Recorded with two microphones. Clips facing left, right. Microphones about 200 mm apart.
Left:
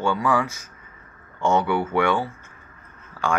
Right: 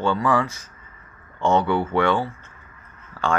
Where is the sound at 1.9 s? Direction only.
15° left (ahead or behind).